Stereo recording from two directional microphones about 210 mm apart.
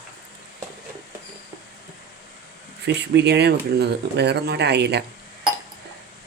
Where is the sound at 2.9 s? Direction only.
55° right (ahead or behind).